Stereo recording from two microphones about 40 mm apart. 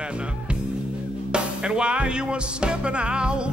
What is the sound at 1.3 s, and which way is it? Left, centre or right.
Speech, right.